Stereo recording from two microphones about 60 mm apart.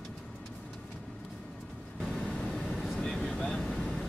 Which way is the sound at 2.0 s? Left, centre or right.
Centre.